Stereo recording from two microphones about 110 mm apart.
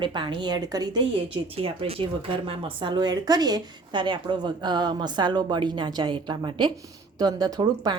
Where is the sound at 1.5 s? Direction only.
60° right (ahead or behind).